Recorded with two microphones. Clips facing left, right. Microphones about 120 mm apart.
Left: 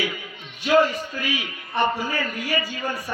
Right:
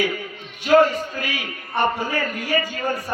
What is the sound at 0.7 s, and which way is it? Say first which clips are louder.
A man's voice: right 3 dB; 45° right (ahead or behind).